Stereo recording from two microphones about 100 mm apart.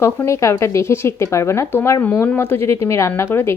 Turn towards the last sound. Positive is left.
turn(degrees=25)  # may be behind; listen again after turning